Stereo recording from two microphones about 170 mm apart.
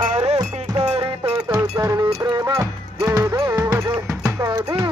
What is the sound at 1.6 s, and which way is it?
Cowbell, 20° right (ahead or behind).